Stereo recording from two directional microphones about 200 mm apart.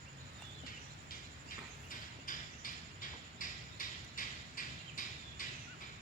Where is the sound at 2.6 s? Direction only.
45° left (ahead or behind).